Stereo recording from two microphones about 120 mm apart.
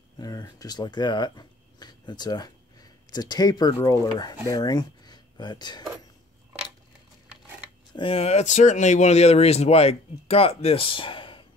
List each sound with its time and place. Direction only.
0.2 s speech: 30° left (ahead or behind)
7.9 s speech: 50° left (ahead or behind)